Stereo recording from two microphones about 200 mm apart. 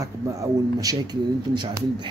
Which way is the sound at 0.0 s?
15° right (ahead or behind).